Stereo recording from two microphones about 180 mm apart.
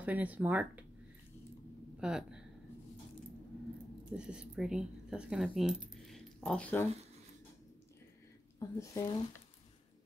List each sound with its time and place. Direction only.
0.0 s speech: 10° right (ahead or behind)
2.0 s speech: 5° right (ahead or behind)
4.2 s speech: 5° right (ahead or behind)
8.5 s speech: 20° left (ahead or behind)